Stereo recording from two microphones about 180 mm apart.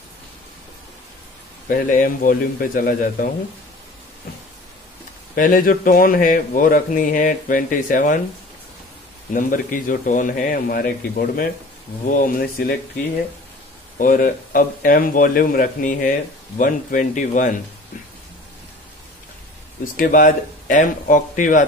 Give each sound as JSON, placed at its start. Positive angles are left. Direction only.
{"t": 1.7, "sound": "speech", "side_deg": 50}
{"t": 5.3, "sound": "speech", "side_deg": 50}
{"t": 9.3, "sound": "speech", "side_deg": 50}
{"t": 13.9, "sound": "speech", "side_deg": 50}
{"t": 19.8, "sound": "speech", "side_deg": 50}